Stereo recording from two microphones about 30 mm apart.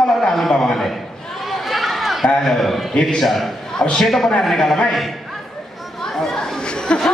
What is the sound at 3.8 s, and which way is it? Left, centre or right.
Speech, left.